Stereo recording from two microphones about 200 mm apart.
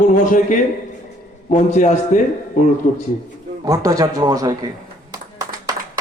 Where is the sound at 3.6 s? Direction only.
20° right (ahead or behind).